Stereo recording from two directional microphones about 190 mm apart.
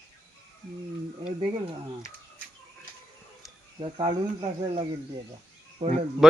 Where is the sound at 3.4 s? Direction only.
Centre (ahead or behind).